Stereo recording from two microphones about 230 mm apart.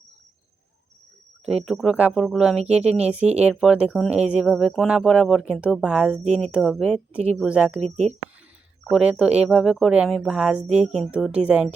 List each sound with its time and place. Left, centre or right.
1.5 s speech: centre
8.9 s speech: centre